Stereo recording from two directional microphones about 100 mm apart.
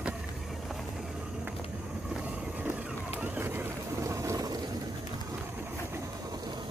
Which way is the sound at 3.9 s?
30° right (ahead or behind).